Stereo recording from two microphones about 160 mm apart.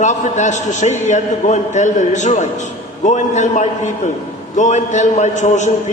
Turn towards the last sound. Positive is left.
turn(degrees=50)  # may be behind; listen again after turning